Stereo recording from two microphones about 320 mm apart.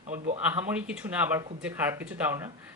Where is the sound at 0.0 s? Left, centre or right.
Right.